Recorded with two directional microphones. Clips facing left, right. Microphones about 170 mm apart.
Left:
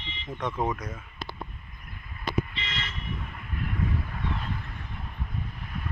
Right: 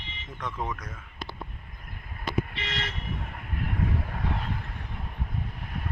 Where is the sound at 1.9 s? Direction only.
50° right (ahead or behind).